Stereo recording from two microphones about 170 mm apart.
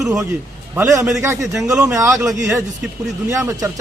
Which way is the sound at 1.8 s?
20° right (ahead or behind).